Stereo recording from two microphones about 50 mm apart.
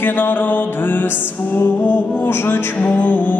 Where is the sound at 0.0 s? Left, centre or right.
Left.